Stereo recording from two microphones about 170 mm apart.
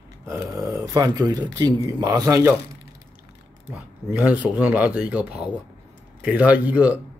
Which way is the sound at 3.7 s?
10° right (ahead or behind).